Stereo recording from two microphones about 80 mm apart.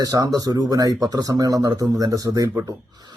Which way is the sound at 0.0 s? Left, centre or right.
Right.